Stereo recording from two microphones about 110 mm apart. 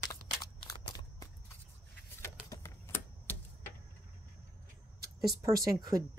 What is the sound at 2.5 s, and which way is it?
Shuffling cards, 25° left (ahead or behind).